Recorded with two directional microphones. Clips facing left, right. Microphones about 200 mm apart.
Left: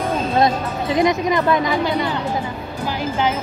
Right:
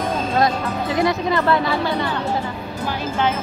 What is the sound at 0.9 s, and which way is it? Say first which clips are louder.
Speech: left 3 dB; 15° left (ahead or behind).